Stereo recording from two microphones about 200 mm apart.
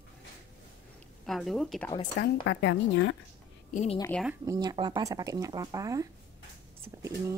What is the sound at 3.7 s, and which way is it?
Speech, 35° left (ahead or behind).